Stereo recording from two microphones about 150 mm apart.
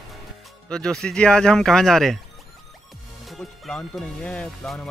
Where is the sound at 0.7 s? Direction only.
5° left (ahead or behind).